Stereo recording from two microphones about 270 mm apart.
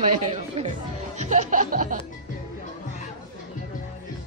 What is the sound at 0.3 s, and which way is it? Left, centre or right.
Speech, right.